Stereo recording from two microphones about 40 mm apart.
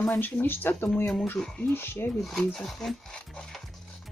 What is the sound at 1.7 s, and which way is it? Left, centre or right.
Speech, left.